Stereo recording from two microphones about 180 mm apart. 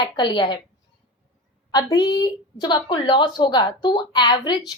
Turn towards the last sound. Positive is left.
turn(degrees=25)  # may be behind; listen again after turning